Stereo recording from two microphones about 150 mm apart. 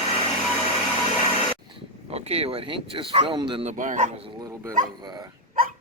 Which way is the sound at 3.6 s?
55° right (ahead or behind).